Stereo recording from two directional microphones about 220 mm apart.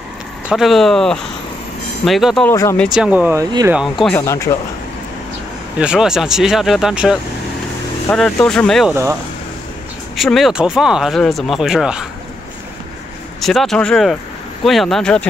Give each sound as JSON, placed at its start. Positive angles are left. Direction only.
{"t": 0.5, "sound": "speech", "side_deg": 0}
{"t": 2.5, "sound": "speech", "side_deg": 15}
{"t": 2.9, "sound": "speech", "side_deg": -5}
{"t": 3.8, "sound": "speech", "side_deg": 0}
{"t": 4.5, "sound": "speech", "side_deg": 20}
{"t": 5.8, "sound": "speech", "side_deg": -5}
{"t": 10.1, "sound": "speech", "side_deg": 0}
{"t": 13.4, "sound": "speech", "side_deg": 0}